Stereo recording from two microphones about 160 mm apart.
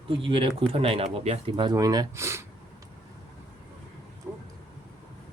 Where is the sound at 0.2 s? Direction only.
35° right (ahead or behind); by 2.4 s 15° right (ahead or behind).